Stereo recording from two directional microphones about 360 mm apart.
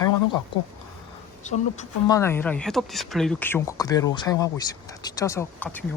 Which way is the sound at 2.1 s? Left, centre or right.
Centre.